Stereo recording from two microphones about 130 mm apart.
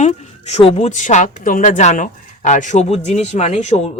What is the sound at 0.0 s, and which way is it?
A woman's voice, 60° left (ahead or behind).